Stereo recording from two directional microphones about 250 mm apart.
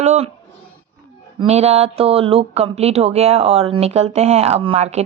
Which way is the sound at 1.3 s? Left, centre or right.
Right.